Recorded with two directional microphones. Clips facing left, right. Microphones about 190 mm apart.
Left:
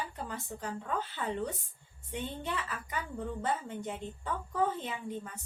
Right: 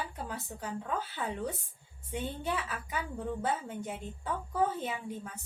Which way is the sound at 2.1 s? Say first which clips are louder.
Right 2 dB; 5° right (ahead or behind).